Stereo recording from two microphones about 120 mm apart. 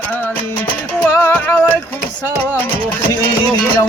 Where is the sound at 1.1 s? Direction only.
20° left (ahead or behind).